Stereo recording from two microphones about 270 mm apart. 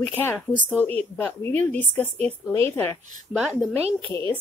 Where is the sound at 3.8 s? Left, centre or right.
Right.